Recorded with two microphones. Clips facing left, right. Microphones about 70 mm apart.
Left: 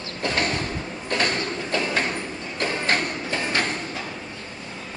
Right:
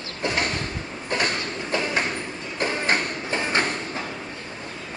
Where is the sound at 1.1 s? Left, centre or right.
Centre.